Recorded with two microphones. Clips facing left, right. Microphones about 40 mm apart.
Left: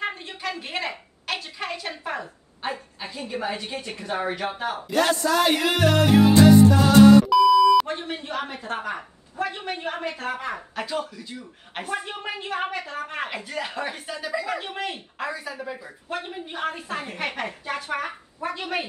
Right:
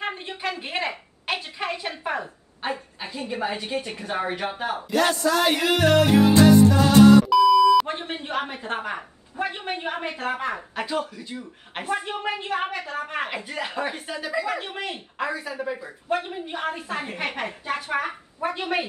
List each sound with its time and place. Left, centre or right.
0.0 s a sound: centre
0.5 s speech: centre
4.9 s music: centre
7.2 s beep: centre
7.8 s a woman's voice: right